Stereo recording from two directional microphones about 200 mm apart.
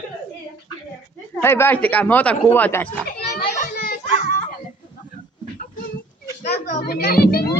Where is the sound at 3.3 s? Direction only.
45° left (ahead or behind).